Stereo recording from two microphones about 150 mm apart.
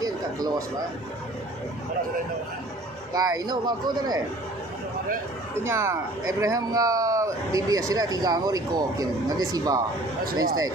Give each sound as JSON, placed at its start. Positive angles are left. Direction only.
{"t": 0.0, "sound": "a sound", "side_deg": -25}
{"t": 3.1, "sound": "speech", "side_deg": -25}
{"t": 5.6, "sound": "speech", "side_deg": -20}